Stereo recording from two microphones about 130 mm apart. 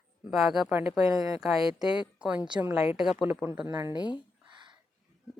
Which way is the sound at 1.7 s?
5° right (ahead or behind).